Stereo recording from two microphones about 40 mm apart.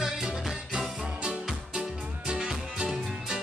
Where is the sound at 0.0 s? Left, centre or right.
Centre.